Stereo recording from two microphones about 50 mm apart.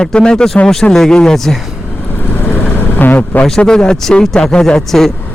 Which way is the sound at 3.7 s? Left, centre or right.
Centre.